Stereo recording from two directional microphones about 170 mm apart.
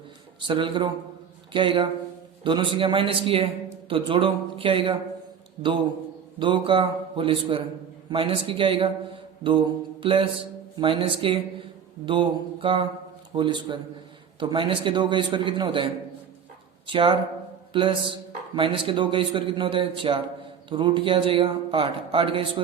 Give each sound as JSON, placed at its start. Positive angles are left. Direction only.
{"t": 0.3, "sound": "a man's voice", "side_deg": -30}
{"t": 6.4, "sound": "a man's voice", "side_deg": -30}